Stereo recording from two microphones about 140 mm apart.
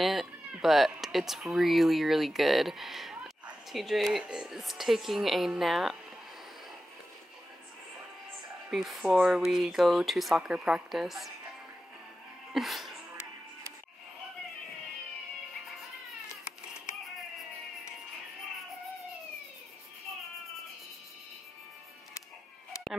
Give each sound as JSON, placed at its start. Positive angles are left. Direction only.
{"t": 0.0, "sound": "speech", "side_deg": 0}
{"t": 8.6, "sound": "speech", "side_deg": -5}
{"t": 12.5, "sound": "speech", "side_deg": 0}